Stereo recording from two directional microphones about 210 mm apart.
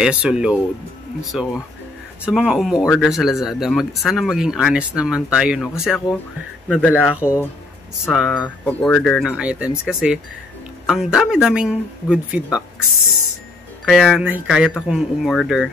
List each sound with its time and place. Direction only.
0.0 s speech: 5° right (ahead or behind)
13.8 s speech: centre (ahead or behind)